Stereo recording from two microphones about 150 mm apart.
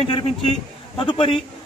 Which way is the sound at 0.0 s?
35° left (ahead or behind).